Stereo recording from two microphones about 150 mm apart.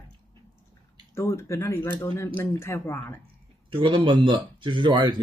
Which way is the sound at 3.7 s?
35° right (ahead or behind).